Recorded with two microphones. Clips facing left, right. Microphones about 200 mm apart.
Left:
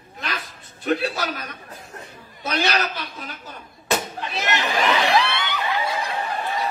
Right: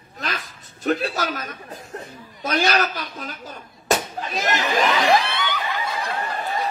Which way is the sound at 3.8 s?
40° right (ahead or behind).